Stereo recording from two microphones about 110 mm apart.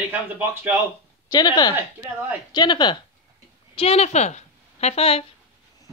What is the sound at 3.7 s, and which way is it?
A woman's voice, 65° left (ahead or behind).